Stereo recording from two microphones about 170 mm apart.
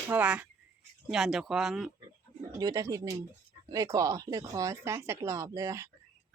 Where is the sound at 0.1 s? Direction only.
10° right (ahead or behind).